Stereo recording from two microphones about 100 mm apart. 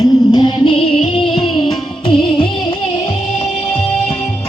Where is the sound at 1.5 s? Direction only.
Centre (ahead or behind).